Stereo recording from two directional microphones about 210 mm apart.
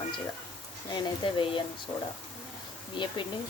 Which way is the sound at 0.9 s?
20° left (ahead or behind).